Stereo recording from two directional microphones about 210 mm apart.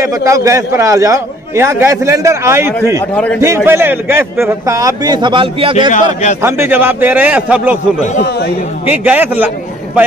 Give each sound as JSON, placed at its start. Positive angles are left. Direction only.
{"t": 0.0, "sound": "a man's voice", "side_deg": -15}
{"t": 3.0, "sound": "a man's voice", "side_deg": 5}
{"t": 3.3, "sound": "a man's voice", "side_deg": -10}
{"t": 6.4, "sound": "a man's voice", "side_deg": -10}
{"t": 8.0, "sound": "speech", "side_deg": 35}
{"t": 8.3, "sound": "speech", "side_deg": 50}
{"t": 8.8, "sound": "a man's voice", "side_deg": -10}